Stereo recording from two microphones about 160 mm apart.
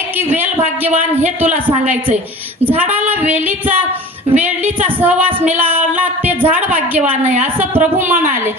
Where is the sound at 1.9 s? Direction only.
10° right (ahead or behind).